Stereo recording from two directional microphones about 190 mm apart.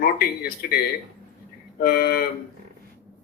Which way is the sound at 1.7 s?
55° left (ahead or behind).